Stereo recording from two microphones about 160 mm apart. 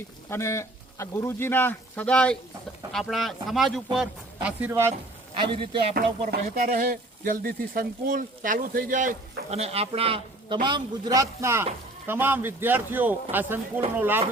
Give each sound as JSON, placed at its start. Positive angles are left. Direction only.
{"t": 0.3, "sound": "a man's voice", "side_deg": 15}
{"t": 5.4, "sound": "a man's voice", "side_deg": -30}
{"t": 5.9, "sound": "speech", "side_deg": -65}
{"t": 9.5, "sound": "a man's voice", "side_deg": -40}